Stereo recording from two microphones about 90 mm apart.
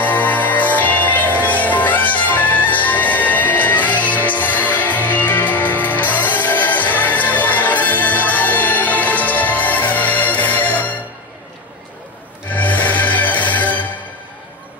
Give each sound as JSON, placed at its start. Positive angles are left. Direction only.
{"t": 0.0, "sound": "music", "side_deg": 20}
{"t": 12.5, "sound": "music", "side_deg": 15}